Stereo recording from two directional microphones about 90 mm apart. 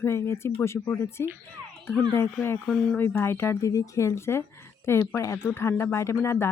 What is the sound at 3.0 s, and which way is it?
Speech, 25° left (ahead or behind).